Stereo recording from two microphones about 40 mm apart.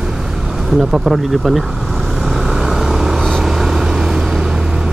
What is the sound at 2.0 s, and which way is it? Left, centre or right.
Vehicle, centre.